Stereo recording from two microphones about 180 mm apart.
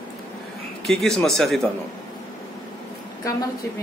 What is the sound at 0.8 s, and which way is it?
Speech, centre (ahead or behind).